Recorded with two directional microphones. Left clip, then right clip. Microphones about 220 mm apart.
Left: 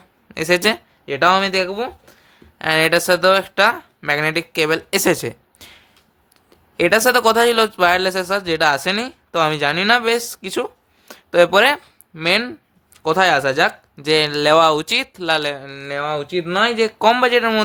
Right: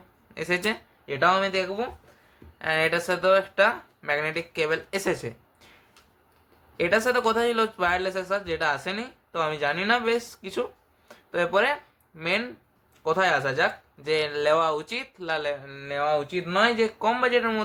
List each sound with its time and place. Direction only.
0.3 s speech: 50° left (ahead or behind)
6.7 s speech: 50° left (ahead or behind)